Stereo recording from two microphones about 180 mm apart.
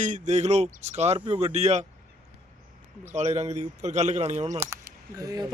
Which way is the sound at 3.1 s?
40° right (ahead or behind).